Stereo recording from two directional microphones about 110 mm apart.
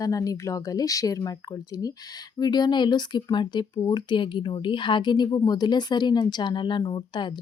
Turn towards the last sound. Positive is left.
turn(degrees=45)  # may be behind; listen again after turning